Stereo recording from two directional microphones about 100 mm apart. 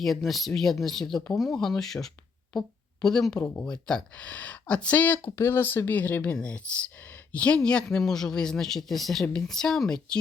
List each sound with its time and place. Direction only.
0.0 s a man's voice: centre (ahead or behind)